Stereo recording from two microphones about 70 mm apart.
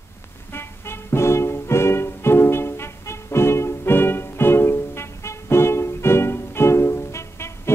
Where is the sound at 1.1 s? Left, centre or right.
Left.